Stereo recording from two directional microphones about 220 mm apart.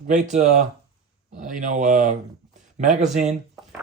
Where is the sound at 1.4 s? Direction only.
35° right (ahead or behind).